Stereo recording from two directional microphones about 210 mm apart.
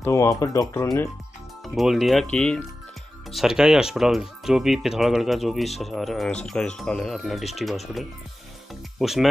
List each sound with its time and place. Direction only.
0.0 s speech: 15° left (ahead or behind)
1.8 s speech: centre (ahead or behind)
9.0 s speech: centre (ahead or behind)